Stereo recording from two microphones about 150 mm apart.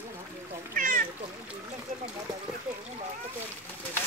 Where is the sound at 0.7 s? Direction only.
65° right (ahead or behind).